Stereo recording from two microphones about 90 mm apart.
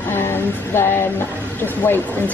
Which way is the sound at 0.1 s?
25° left (ahead or behind).